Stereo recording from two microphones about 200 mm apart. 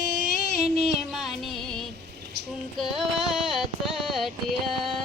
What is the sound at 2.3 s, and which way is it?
Child singing, 55° right (ahead or behind).